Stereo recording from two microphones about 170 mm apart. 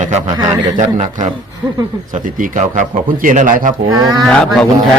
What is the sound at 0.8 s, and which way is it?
Speech, 45° right (ahead or behind).